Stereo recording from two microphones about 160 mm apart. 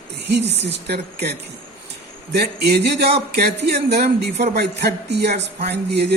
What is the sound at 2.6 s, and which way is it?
A man's voice, 90° right.